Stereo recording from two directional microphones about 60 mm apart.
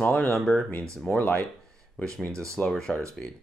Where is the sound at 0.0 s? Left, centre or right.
Left.